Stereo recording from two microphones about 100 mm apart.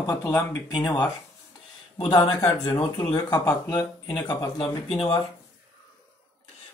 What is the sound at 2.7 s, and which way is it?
Speech, 25° left (ahead or behind).